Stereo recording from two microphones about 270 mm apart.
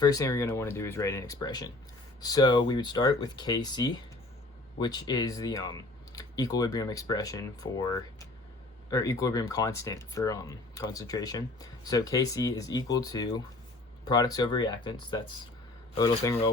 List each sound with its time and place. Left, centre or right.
0.0 s speech: centre